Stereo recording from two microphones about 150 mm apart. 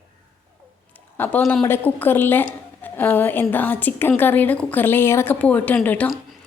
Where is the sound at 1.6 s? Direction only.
15° left (ahead or behind).